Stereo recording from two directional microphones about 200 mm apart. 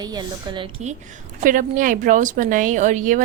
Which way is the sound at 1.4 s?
40° right (ahead or behind).